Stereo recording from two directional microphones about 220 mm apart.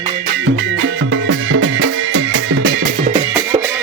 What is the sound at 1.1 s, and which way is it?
Music, 60° right (ahead or behind).